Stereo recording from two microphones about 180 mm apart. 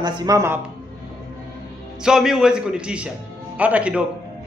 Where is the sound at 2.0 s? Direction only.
5° right (ahead or behind).